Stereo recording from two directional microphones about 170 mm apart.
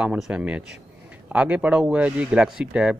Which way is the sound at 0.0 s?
5° right (ahead or behind).